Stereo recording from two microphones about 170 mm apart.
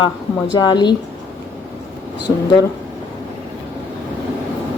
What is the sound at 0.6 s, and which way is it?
Speech, 25° left (ahead or behind).